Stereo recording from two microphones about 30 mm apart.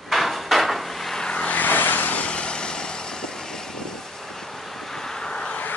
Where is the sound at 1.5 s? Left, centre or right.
Left.